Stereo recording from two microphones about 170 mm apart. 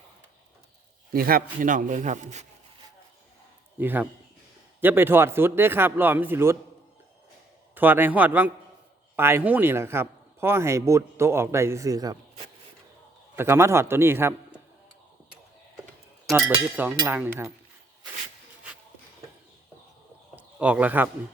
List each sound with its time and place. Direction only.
1.1 s a man's voice: 60° right (ahead or behind); by 2.5 s 45° right (ahead or behind)
3.8 s a man's voice: 10° right (ahead or behind)
7.8 s a man's voice: 10° right (ahead or behind)
13.3 s a man's voice: 15° right (ahead or behind)
16.3 s a man's voice: 10° right (ahead or behind)
20.3 s a sound: 10° right (ahead or behind)